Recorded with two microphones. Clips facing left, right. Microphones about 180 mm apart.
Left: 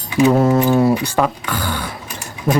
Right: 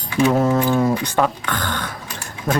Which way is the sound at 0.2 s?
10° left (ahead or behind).